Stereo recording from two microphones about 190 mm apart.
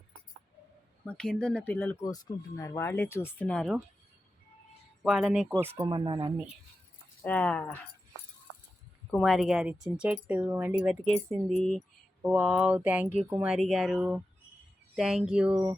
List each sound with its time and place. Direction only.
1.0 s speech: 5° left (ahead or behind)
5.0 s speech: centre (ahead or behind)
5.8 s speech: 25° right (ahead or behind)
7.2 s speech: 5° left (ahead or behind)
9.0 s speech: 5° left (ahead or behind)
11.4 s speech: 5° left (ahead or behind)
12.2 s speech: 5° right (ahead or behind)